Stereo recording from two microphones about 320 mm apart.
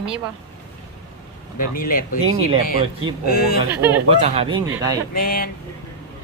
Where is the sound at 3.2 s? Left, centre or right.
Left.